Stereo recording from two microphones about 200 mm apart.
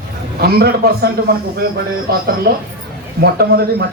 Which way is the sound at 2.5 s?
45° right (ahead or behind).